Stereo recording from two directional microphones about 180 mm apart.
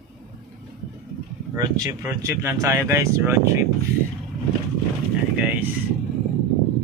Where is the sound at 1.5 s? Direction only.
20° right (ahead or behind).